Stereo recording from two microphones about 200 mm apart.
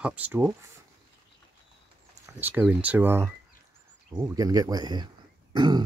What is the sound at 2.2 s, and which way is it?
Speech, 10° right (ahead or behind).